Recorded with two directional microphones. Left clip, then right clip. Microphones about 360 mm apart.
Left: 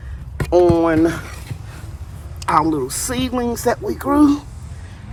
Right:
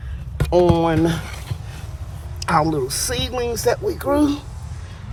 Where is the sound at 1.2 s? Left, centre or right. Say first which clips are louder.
Right 1 dB; centre.